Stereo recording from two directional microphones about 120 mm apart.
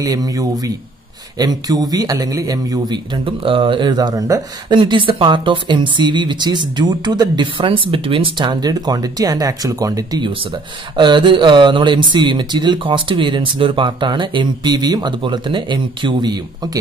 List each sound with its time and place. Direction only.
0.0 s speech: 30° right (ahead or behind)
4.7 s speech: 45° right (ahead or behind)
11.0 s speech: 40° right (ahead or behind)